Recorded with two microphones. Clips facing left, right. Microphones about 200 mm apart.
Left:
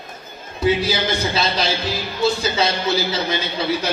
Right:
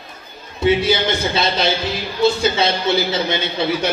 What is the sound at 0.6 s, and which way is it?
Speech, 25° right (ahead or behind).